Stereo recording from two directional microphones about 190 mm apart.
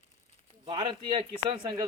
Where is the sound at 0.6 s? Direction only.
25° right (ahead or behind).